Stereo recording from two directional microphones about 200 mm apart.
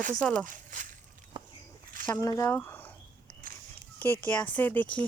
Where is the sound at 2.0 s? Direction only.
15° left (ahead or behind).